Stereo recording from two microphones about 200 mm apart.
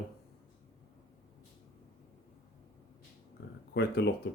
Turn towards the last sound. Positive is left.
turn(degrees=55)  # may be behind; listen again after turning